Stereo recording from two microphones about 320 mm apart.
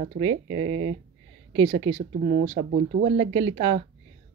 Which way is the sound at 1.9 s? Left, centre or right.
Centre.